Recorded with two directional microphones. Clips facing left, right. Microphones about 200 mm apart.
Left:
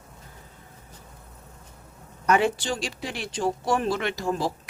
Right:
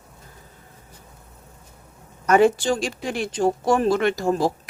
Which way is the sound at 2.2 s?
45° right (ahead or behind).